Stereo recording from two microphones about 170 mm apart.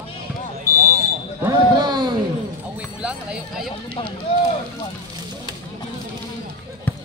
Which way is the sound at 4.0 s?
30° left (ahead or behind).